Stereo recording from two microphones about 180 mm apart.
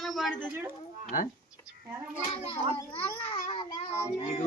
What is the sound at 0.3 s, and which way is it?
Speech, 10° right (ahead or behind).